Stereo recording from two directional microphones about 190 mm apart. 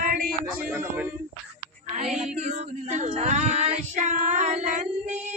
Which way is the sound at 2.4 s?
40° right (ahead or behind).